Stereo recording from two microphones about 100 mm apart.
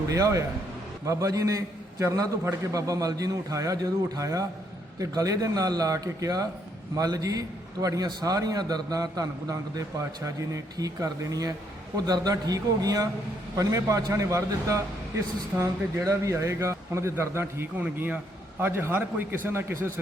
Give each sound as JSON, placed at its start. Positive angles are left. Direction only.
{"t": 0.1, "sound": "a man's voice", "side_deg": -35}